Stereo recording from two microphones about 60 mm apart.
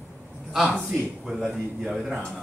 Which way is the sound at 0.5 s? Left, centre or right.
Centre.